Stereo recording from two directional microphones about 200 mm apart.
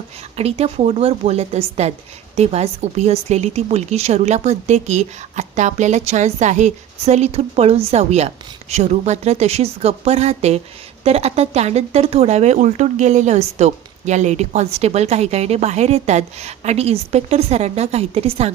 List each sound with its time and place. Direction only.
0.3 s speech: 30° right (ahead or behind)